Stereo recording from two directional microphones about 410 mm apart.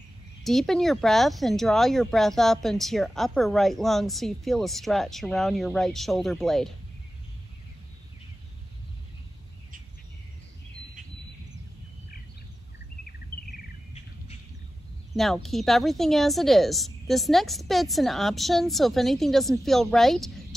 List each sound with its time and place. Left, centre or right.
0.4 s speech: centre
13.9 s bird: centre
15.1 s speech: centre